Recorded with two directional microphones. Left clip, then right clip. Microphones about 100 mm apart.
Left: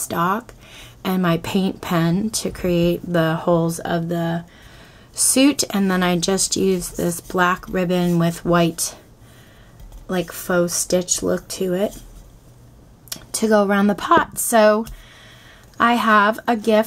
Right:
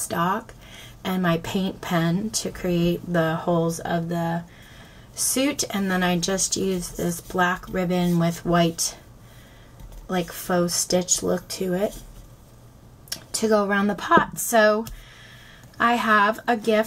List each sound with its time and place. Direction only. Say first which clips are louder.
0.1 s a woman's voice: left 4 dB; 30° left (ahead or behind)
5.3 s a woman's voice: left 7 dB; 45° left (ahead or behind)
10.3 s a woman's voice: left 4 dB; 40° left (ahead or behind)
13.1 s a woman's voice: left 4 dB; 40° left (ahead or behind)